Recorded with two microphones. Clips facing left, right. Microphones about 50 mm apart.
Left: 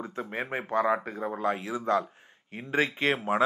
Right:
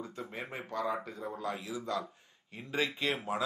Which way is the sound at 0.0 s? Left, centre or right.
Left.